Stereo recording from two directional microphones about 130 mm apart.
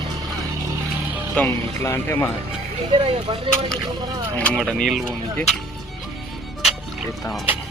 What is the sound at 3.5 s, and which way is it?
Speech, 40° right (ahead or behind).